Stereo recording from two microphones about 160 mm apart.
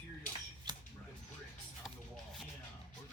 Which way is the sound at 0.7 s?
30° right (ahead or behind).